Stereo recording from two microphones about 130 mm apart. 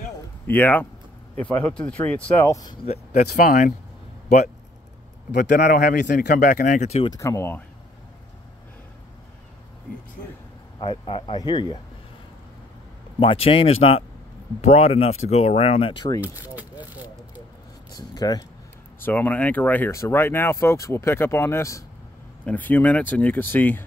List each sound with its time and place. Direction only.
0.5 s speech: 15° left (ahead or behind)
2.4 s speech: 30° left (ahead or behind)
3.2 s speech: 85° left
5.4 s speech: 85° left; by 7.1 s 60° left (ahead or behind)
7.1 s speech: 25° left (ahead or behind)
10.8 s speech: 40° left (ahead or behind)
13.2 s speech: 45° left (ahead or behind)
16.2 s a sound: 15° right (ahead or behind)
17.9 s a sound: 30° left (ahead or behind)
19.0 s speech: 15° left (ahead or behind)
22.4 s speech: 10° left (ahead or behind)